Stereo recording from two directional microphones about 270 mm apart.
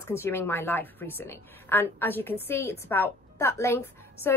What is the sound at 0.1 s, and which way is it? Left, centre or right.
A woman's voice, centre.